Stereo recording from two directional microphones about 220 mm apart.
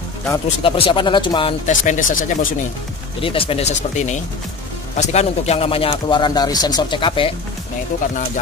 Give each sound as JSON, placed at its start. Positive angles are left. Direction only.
{"t": 0.6, "sound": "speech", "side_deg": 25}
{"t": 1.7, "sound": "speech", "side_deg": 35}
{"t": 3.2, "sound": "speech", "side_deg": 25}